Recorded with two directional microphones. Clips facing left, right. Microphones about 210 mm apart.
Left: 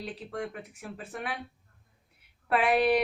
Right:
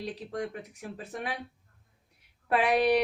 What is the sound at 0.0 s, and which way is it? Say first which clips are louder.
Speech: right 1 dB; 40° right (ahead or behind).